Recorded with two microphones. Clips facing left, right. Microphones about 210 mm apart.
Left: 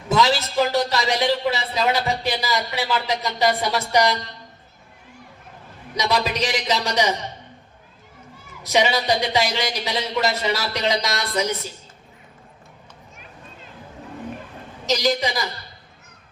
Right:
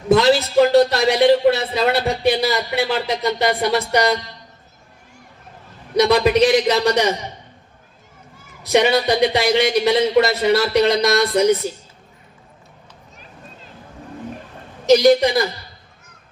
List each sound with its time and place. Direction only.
0.1 s speech: 60° right (ahead or behind)
6.0 s speech: 60° right (ahead or behind)
8.7 s speech: 60° right (ahead or behind)
14.8 s speech: 60° right (ahead or behind)